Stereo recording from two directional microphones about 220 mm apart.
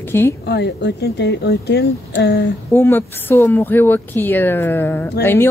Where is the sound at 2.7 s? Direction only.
10° left (ahead or behind).